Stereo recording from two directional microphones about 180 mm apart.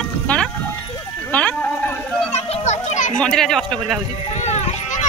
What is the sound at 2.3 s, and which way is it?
Children playing, 35° left (ahead or behind).